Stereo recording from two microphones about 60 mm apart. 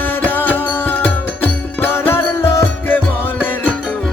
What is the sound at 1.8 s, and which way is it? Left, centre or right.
Music, left.